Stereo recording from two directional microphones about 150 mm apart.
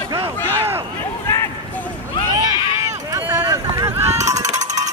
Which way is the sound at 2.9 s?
20° right (ahead or behind).